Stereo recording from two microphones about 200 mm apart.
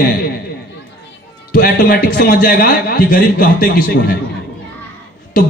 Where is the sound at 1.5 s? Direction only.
50° left (ahead or behind).